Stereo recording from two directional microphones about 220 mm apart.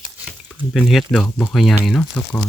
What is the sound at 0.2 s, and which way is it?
Speech, centre (ahead or behind).